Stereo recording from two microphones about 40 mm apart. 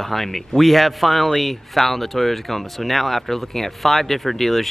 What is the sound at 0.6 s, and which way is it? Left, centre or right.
Speech, centre.